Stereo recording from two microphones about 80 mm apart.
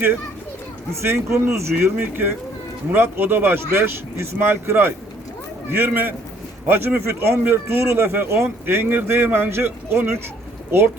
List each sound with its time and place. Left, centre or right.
1.0 s speech: right
1.8 s speech: right